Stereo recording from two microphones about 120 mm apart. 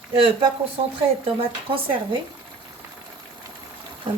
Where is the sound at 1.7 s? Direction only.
50° right (ahead or behind).